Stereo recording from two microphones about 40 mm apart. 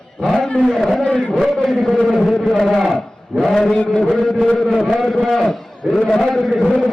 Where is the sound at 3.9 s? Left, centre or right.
Centre.